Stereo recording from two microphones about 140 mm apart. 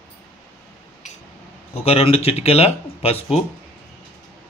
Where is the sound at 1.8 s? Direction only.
45° left (ahead or behind).